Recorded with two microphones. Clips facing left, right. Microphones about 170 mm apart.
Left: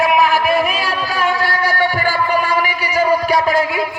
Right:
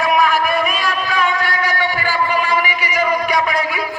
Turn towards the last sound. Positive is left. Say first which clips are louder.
# left 3 dB
turn(degrees=25)  # may be behind; listen again after turning